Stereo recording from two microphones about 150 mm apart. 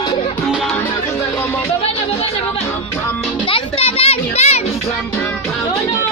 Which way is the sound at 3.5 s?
40° left (ahead or behind).